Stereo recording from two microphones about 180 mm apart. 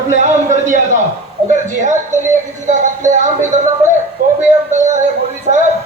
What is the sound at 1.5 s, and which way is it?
A man's voice, 45° right (ahead or behind).